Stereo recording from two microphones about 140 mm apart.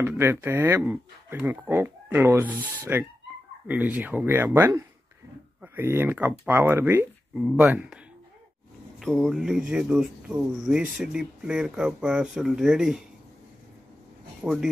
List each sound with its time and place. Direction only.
0.0 s speech: 15° right (ahead or behind)
9.0 s speech: centre (ahead or behind)
14.4 s speech: 5° right (ahead or behind)